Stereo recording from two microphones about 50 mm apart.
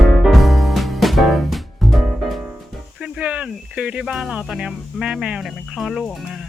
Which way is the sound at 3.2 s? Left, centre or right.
Right.